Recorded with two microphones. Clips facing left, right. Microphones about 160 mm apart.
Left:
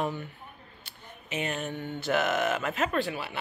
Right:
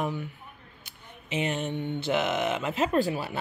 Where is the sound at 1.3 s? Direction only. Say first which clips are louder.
Right 3 dB; 25° right (ahead or behind).